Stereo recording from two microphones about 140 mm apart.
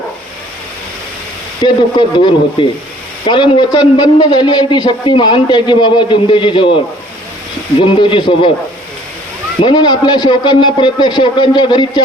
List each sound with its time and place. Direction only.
1.6 s a man's voice: 35° left (ahead or behind)
7.8 s a man's voice: 40° left (ahead or behind)
9.6 s a man's voice: 35° left (ahead or behind)